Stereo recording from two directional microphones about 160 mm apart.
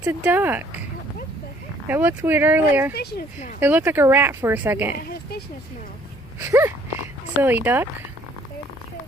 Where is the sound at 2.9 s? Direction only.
90° left.